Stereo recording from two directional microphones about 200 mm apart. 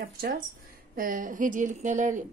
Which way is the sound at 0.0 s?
45° right (ahead or behind).